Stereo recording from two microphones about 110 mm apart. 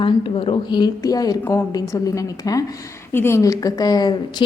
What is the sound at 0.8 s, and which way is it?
A woman's voice, 35° left (ahead or behind).